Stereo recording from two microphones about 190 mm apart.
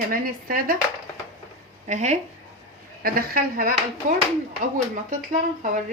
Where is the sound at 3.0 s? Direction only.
50° right (ahead or behind).